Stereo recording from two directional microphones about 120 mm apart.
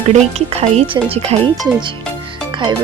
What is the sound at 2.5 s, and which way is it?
Music, 40° right (ahead or behind).